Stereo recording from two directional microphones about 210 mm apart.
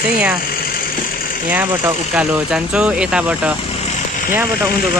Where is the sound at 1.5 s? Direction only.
5° right (ahead or behind).